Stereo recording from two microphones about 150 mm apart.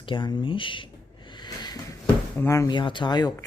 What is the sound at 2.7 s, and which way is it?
Speech, 30° left (ahead or behind).